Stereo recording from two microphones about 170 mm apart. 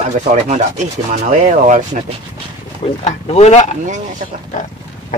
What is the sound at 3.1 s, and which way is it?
Speech, 40° left (ahead or behind).